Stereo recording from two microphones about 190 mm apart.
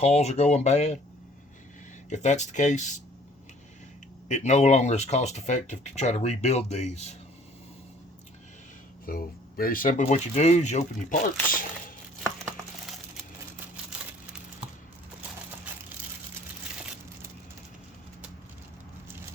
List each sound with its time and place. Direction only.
0.0 s speech: 35° left (ahead or behind)
2.0 s speech: 40° left (ahead or behind)
4.3 s speech: 35° left (ahead or behind)
9.0 s speech: 50° left (ahead or behind)